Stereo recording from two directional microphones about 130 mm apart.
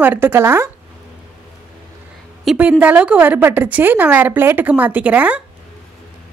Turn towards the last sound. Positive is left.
turn(degrees=-10)  # may be behind; listen again after turning